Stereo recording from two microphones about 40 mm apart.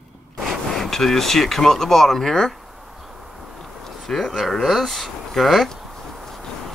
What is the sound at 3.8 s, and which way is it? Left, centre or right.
Speech, centre.